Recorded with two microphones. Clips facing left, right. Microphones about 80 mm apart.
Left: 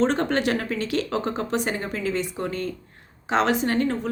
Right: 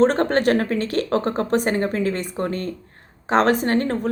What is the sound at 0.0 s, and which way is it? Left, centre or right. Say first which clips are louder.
Speech: right 5 dB; right.